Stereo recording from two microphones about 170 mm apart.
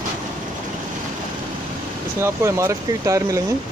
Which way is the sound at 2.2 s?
15° right (ahead or behind).